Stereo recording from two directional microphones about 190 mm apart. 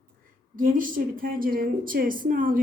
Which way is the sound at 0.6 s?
45° right (ahead or behind).